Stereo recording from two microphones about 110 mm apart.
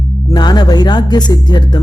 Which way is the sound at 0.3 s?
40° left (ahead or behind).